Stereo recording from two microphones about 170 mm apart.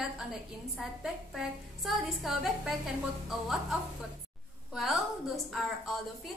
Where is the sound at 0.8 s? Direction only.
Centre (ahead or behind).